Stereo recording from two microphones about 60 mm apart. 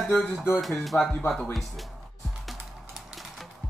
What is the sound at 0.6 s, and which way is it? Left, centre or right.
Speech, centre.